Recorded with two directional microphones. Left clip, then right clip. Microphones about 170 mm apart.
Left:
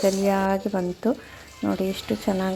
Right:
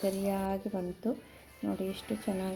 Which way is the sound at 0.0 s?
20° left (ahead or behind).